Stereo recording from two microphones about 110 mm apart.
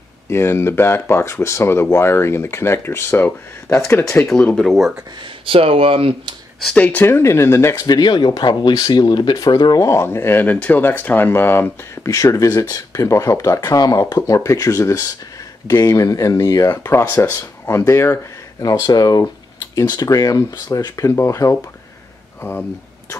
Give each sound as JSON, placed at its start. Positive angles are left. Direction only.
{"t": 0.3, "sound": "speech", "side_deg": 25}
{"t": 4.3, "sound": "speech", "side_deg": 10}
{"t": 5.4, "sound": "speech", "side_deg": -55}
{"t": 6.6, "sound": "speech", "side_deg": 10}
{"t": 7.8, "sound": "speech", "side_deg": 40}